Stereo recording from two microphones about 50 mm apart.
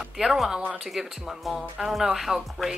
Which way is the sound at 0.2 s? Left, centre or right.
Centre.